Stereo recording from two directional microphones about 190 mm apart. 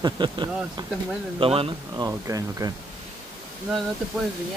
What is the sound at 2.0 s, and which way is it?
Speech, 15° right (ahead or behind).